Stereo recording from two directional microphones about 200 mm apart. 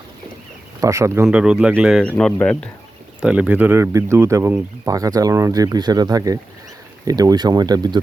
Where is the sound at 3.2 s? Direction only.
5° right (ahead or behind).